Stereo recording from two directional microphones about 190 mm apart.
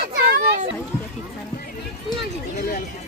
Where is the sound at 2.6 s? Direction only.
50° left (ahead or behind).